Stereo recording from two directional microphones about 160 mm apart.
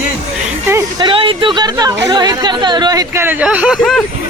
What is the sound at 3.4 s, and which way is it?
Speech, 5° right (ahead or behind).